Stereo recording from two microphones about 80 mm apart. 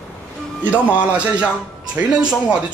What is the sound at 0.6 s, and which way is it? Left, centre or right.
A man's voice, centre.